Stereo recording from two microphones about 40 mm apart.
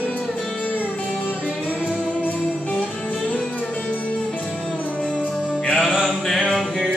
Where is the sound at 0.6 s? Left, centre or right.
Left.